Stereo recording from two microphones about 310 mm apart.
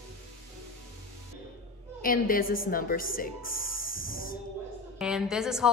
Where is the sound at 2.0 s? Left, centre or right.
Left.